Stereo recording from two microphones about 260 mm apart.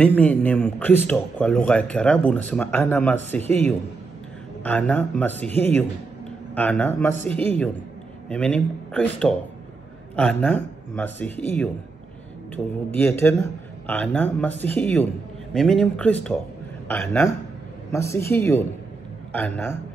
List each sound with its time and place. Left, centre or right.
0.0 s a man's voice: centre